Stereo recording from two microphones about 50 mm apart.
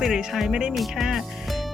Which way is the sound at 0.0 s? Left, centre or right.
Centre.